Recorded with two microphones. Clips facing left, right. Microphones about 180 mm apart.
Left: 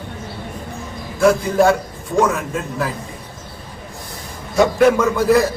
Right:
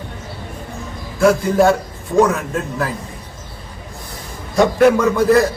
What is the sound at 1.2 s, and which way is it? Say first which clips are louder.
A man's voice: right 1 dB; centre (ahead or behind).